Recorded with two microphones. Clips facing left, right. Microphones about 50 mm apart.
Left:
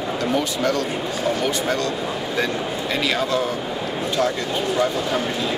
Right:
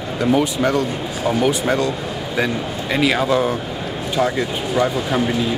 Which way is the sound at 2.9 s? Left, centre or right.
Centre.